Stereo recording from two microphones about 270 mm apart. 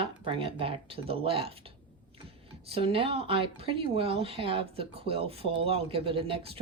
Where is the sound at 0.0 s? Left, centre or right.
Centre.